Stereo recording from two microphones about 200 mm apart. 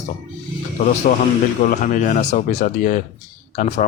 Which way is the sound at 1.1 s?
45° left (ahead or behind).